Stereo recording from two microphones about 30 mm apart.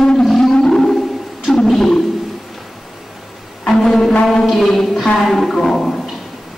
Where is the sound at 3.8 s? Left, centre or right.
Centre.